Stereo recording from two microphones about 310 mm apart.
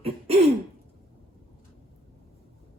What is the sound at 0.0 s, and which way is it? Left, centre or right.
Throat clearing, centre.